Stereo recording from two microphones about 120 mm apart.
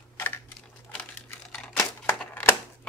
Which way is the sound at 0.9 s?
10° left (ahead or behind).